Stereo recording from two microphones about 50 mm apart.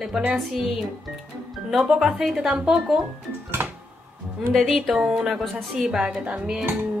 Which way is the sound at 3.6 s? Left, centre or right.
Right.